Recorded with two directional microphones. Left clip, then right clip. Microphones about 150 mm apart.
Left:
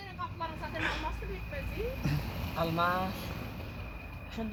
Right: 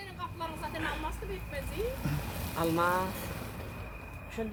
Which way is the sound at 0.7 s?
10° left (ahead or behind).